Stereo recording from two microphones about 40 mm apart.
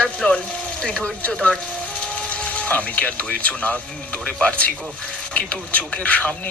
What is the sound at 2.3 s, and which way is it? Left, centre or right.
Speech, left.